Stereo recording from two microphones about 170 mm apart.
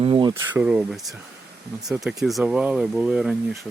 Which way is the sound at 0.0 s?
30° right (ahead or behind).